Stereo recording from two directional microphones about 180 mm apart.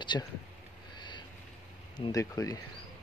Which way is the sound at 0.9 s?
25° left (ahead or behind).